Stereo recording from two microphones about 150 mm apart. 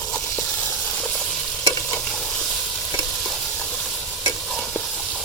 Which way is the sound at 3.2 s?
5° left (ahead or behind).